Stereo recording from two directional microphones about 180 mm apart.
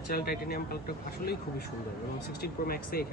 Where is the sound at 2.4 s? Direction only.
55° left (ahead or behind).